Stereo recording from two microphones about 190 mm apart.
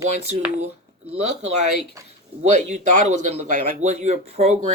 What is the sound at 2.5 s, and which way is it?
Speech, 40° right (ahead or behind).